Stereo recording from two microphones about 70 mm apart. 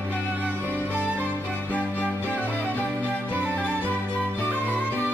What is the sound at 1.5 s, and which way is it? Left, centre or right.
Music, left.